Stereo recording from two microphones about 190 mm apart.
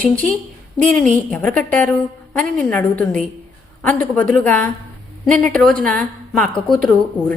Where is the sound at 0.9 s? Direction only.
5° left (ahead or behind).